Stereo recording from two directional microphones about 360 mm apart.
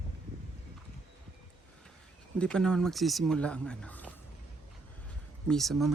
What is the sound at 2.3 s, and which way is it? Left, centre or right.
Speech, centre.